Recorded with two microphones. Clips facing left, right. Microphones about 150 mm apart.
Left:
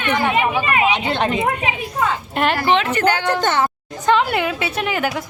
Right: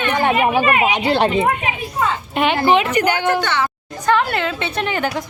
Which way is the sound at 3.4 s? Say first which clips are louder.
Left 2 dB; 45° left (ahead or behind).